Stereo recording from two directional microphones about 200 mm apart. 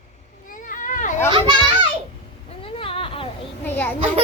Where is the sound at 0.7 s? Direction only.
40° left (ahead or behind).